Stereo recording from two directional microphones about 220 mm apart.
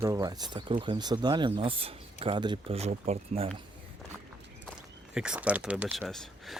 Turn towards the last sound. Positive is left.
turn(degrees=0)  # may be behind; listen again after turning